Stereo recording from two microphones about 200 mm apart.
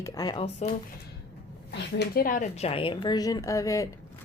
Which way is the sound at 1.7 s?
50° left (ahead or behind).